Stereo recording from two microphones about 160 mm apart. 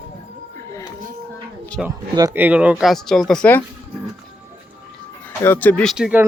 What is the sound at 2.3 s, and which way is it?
Speech, 10° right (ahead or behind).